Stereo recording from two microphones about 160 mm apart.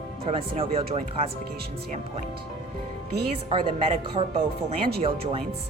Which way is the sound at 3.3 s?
30° right (ahead or behind).